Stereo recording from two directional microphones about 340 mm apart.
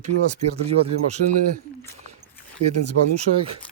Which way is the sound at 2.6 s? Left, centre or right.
Right.